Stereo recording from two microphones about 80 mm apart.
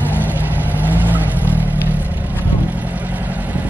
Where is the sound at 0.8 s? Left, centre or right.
Right.